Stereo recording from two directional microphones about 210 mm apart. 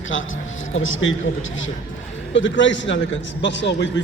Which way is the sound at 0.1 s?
65° left (ahead or behind).